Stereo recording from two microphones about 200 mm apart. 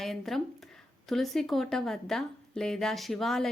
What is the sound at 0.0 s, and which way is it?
Speech, centre (ahead or behind).